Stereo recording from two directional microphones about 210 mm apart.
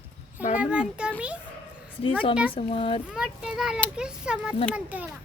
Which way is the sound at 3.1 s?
5° right (ahead or behind).